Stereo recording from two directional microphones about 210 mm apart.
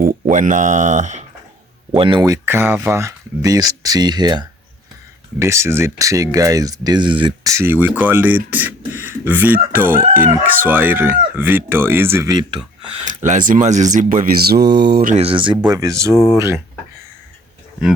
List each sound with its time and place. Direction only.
0.0 s speech: 40° right (ahead or behind)
2.0 s speech: 20° right (ahead or behind)
13.2 s speech: 40° right (ahead or behind)
14.8 s mantra: 50° right (ahead or behind)
15.1 s speech: 25° right (ahead or behind); by 16.6 s 10° right (ahead or behind)